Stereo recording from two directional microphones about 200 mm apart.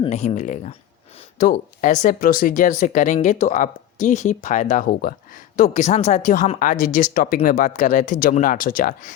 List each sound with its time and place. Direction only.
0.0 s speech: 35° left (ahead or behind)
5.5 s speech: 35° left (ahead or behind)